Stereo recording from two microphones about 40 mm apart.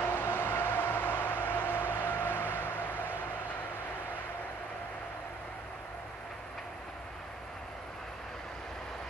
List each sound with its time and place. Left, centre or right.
0.0 s vehicle: left